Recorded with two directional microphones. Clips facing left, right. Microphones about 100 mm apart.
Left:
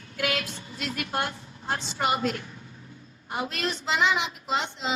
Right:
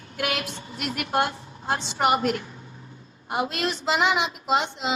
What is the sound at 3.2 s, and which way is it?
A woman's voice, 20° right (ahead or behind).